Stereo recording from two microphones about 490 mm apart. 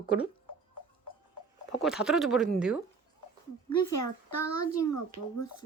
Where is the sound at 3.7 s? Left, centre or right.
Left.